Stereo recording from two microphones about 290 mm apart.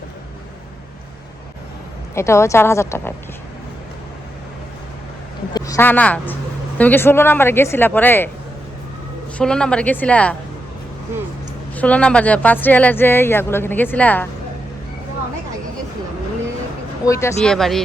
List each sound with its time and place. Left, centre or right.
2.1 s speech: centre
5.5 s speech: centre
9.4 s speech: centre
11.7 s speech: centre
17.1 s speech: centre